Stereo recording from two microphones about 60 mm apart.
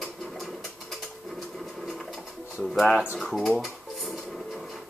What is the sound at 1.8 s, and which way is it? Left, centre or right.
Pigeon, centre.